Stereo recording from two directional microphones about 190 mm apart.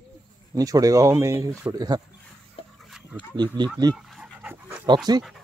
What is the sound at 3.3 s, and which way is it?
Speech, 25° right (ahead or behind).